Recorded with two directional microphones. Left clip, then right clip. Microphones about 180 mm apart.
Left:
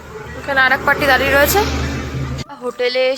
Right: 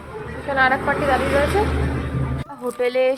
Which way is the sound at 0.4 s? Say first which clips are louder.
Left 5 dB; centre (ahead or behind).